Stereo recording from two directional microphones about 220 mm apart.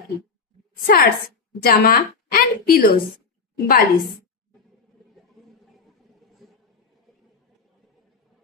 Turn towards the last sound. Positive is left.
turn(degrees=0)  # may be behind; listen again after turning